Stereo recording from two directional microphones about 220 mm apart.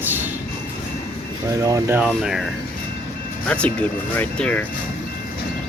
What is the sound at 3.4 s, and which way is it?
Speech, 5° left (ahead or behind).